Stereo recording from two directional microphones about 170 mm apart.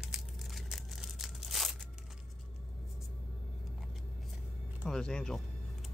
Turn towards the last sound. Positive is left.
turn(degrees=5)  # may be behind; listen again after turning